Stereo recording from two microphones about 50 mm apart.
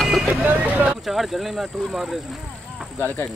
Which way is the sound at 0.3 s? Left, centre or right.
Right.